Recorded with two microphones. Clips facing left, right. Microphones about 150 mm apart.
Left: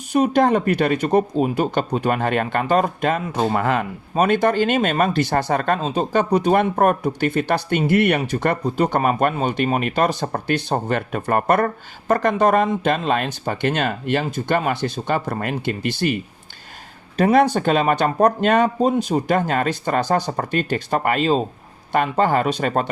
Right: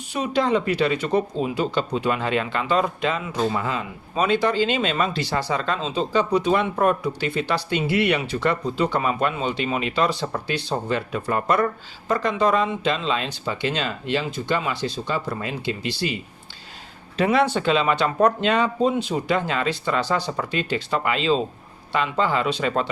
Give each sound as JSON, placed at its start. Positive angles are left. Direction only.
{"t": 0.1, "sound": "speech", "side_deg": 50}
{"t": 17.2, "sound": "speech", "side_deg": 45}